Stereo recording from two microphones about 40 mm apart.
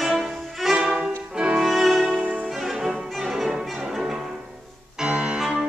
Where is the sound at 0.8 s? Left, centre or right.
Right.